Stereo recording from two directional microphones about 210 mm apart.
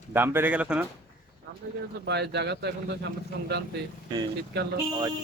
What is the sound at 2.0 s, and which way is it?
Speech, 55° right (ahead or behind).